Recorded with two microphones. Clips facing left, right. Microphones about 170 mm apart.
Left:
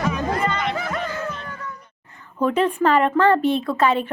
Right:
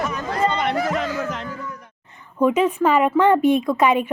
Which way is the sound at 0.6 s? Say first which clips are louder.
Right 4 dB; 70° right (ahead or behind).